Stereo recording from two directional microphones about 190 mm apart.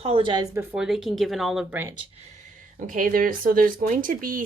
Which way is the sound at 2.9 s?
45° right (ahead or behind).